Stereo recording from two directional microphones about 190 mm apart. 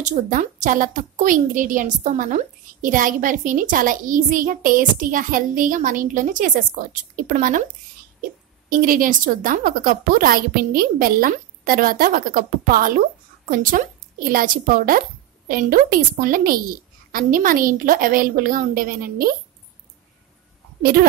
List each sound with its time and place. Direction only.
0.0 s a woman's voice: 40° right (ahead or behind)
8.6 s a woman's voice: 45° right (ahead or behind)